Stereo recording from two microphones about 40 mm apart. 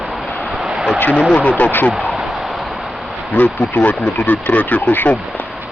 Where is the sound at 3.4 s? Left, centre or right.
Left.